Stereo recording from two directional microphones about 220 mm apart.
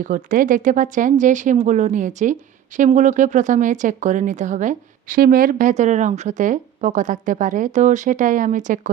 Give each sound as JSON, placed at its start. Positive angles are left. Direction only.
{"t": 0.0, "sound": "speech", "side_deg": -35}